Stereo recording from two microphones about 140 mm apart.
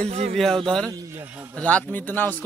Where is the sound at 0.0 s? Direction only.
50° right (ahead or behind).